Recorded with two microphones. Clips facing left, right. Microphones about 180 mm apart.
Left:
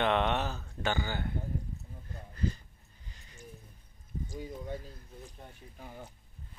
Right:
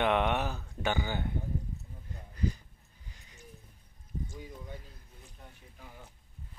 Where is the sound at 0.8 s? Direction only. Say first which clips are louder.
Right 1 dB; 15° right (ahead or behind).